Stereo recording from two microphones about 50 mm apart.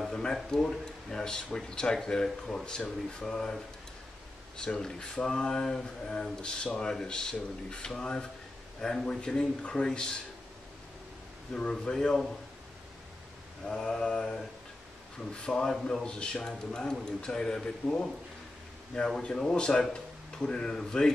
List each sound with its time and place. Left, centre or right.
0.1 s speech: centre
11.7 s speech: centre
13.7 s a man's voice: centre